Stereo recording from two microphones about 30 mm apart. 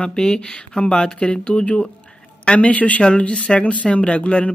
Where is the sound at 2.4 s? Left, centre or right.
Left.